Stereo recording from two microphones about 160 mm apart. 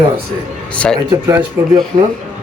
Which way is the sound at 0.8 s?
5° left (ahead or behind).